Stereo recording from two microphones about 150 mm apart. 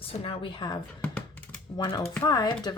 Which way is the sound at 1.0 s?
10° left (ahead or behind).